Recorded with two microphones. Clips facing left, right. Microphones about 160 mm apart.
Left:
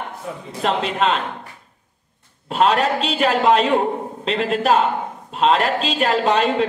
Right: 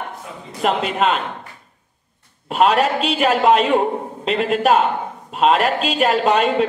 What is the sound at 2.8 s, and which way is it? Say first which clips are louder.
Speech: right 1 dB; 10° right (ahead or behind).